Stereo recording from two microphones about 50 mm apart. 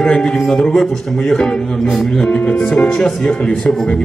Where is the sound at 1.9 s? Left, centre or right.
Centre.